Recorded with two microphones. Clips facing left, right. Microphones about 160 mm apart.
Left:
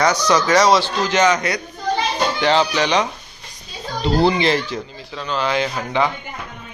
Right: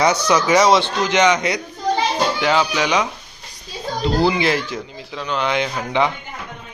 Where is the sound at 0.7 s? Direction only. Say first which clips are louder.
Even; 20° right (ahead or behind).